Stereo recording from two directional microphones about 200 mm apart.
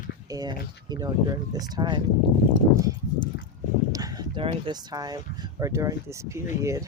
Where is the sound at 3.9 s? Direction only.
20° right (ahead or behind).